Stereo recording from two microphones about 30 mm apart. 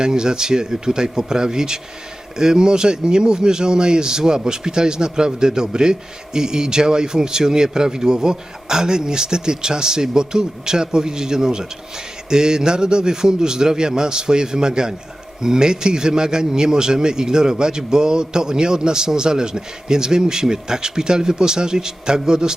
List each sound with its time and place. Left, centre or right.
0.0 s speech: right